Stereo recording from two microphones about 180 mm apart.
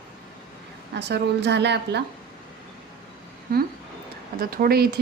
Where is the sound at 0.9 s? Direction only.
70° right (ahead or behind).